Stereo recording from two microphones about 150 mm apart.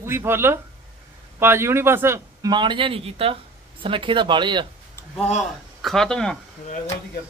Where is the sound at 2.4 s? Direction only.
30° right (ahead or behind).